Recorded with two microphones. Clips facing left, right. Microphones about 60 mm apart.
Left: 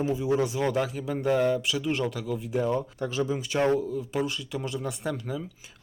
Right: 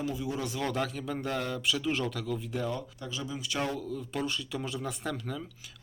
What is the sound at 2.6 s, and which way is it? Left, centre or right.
Speech, left.